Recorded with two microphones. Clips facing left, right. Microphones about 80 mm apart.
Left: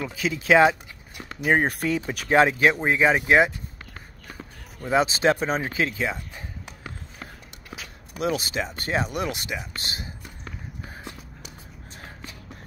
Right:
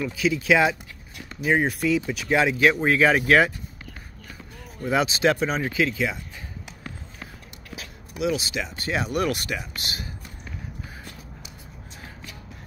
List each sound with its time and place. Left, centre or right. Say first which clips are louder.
0.0 s speech: right 4 dB; left
2.9 s speech: right 1 dB; left
4.8 s speech: left 1 dB; left
8.2 s speech: even; left
9.0 s speech: right 3 dB; left
9.8 s speech: even; left